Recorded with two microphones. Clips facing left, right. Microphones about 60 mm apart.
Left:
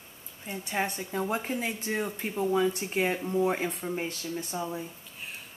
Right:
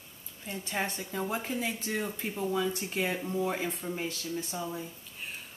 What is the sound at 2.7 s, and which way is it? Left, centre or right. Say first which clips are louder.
Speech: left 4 dB; left.